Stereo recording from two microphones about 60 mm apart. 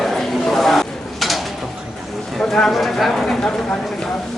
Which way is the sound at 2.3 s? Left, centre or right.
Centre.